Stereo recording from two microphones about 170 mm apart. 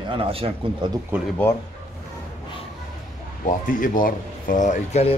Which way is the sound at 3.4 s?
50° left (ahead or behind).